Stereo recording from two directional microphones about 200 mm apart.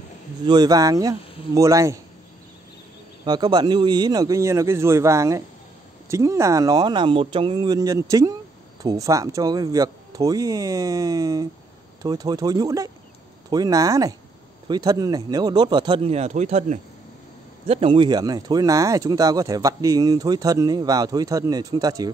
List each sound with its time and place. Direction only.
0.5 s speech: 20° right (ahead or behind)
3.3 s speech: 20° right (ahead or behind)